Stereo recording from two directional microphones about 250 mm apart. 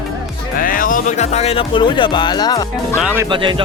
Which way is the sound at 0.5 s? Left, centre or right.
Left.